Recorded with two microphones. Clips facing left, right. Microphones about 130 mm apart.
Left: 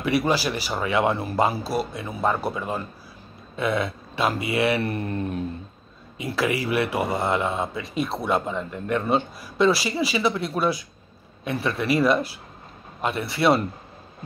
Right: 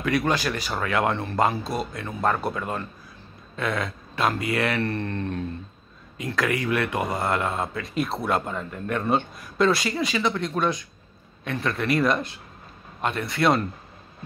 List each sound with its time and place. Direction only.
0.0 s speech: 5° left (ahead or behind)